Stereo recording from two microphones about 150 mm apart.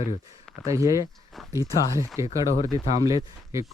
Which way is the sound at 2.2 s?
20° right (ahead or behind).